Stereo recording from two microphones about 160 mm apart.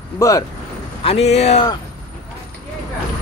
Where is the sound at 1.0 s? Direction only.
40° left (ahead or behind).